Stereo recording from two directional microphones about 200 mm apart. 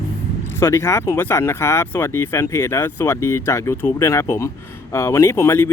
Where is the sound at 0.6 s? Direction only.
15° left (ahead or behind).